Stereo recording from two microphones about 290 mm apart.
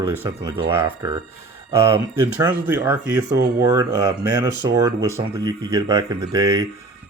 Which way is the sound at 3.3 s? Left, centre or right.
Right.